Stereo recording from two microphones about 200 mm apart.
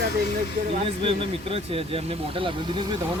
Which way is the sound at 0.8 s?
30° right (ahead or behind).